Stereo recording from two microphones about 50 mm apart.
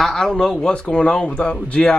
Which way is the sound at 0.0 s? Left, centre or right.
Centre.